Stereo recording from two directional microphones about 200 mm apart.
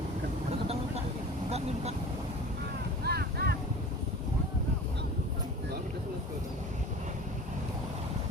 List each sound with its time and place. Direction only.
1.5 s vehicle: 30° right (ahead or behind)
3.0 s boat: 50° right (ahead or behind)